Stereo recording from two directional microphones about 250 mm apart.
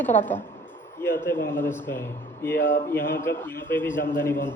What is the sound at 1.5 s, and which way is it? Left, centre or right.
A man's voice, centre.